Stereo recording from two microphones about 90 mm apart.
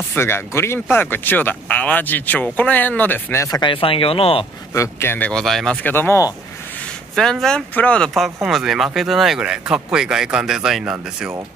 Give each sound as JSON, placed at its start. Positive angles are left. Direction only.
{"t": 0.1, "sound": "speech", "side_deg": 25}
{"t": 3.6, "sound": "speech", "side_deg": 85}
{"t": 4.7, "sound": "speech", "side_deg": 30}
{"t": 5.3, "sound": "speech", "side_deg": 5}
{"t": 5.9, "sound": "speech", "side_deg": 25}
{"t": 7.2, "sound": "speech", "side_deg": 5}
{"t": 8.1, "sound": "speech", "side_deg": 0}